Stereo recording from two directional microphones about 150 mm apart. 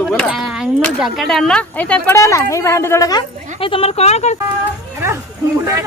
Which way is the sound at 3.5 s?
35° left (ahead or behind).